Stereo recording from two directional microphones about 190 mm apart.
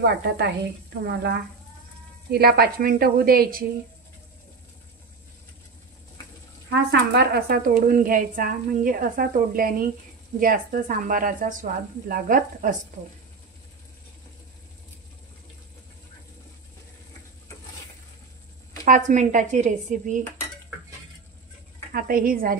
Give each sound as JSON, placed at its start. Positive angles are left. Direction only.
{"t": 0.0, "sound": "a woman's voice", "side_deg": -60}
{"t": 6.7, "sound": "a woman's voice", "side_deg": -60}
{"t": 18.9, "sound": "speech", "side_deg": -40}
{"t": 21.9, "sound": "a woman's voice", "side_deg": -50}